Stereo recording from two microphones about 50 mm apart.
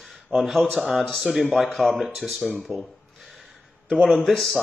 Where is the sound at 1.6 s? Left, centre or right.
Centre.